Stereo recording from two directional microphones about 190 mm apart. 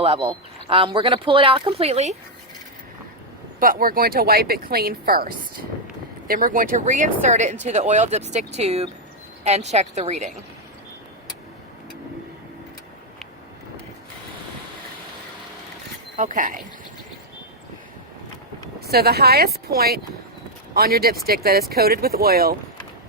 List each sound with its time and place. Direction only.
0.0 s speech: 30° right (ahead or behind)
3.6 s speech: 50° right (ahead or behind)
16.1 s speech: 40° right (ahead or behind)
18.8 s speech: 55° right (ahead or behind)